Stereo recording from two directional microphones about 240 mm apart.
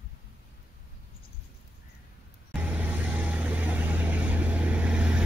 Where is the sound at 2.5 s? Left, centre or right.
Centre.